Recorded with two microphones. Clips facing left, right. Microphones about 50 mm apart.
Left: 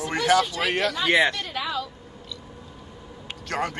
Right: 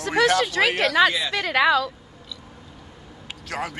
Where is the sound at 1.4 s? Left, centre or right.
Right.